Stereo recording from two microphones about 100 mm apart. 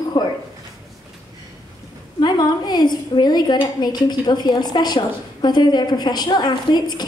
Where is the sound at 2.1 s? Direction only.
45° left (ahead or behind).